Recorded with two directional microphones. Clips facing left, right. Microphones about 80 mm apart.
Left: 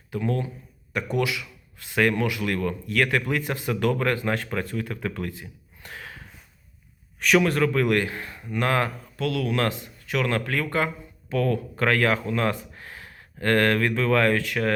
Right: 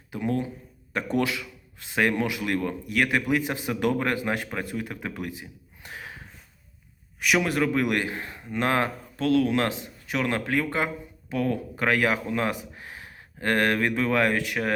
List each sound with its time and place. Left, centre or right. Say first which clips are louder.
0.1 s speech: even; right
0.9 s speech: even; right